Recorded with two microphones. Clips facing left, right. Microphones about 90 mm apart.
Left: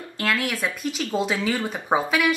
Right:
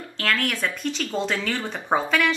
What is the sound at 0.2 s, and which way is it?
Speech, 5° left (ahead or behind).